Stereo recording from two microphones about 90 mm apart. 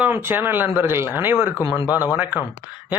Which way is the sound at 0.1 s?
25° right (ahead or behind).